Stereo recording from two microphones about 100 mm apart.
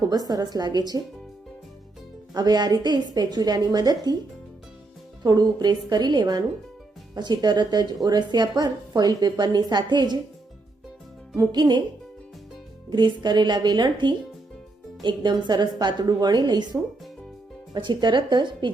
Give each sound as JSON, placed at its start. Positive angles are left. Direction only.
{"t": 0.1, "sound": "a woman's voice", "side_deg": -40}
{"t": 2.3, "sound": "a woman's voice", "side_deg": -45}
{"t": 5.2, "sound": "a woman's voice", "side_deg": -45}
{"t": 11.3, "sound": "a woman's voice", "side_deg": -45}
{"t": 12.9, "sound": "a woman's voice", "side_deg": -45}